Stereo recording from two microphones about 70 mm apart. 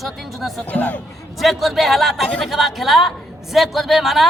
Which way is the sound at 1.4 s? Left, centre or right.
Centre.